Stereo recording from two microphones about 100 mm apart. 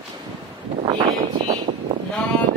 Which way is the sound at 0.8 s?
60° right (ahead or behind).